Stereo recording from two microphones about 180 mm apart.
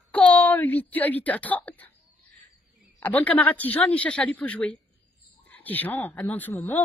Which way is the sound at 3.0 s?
10° left (ahead or behind).